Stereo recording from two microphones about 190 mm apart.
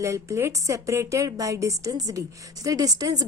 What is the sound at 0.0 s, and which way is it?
A woman's voice, 15° right (ahead or behind).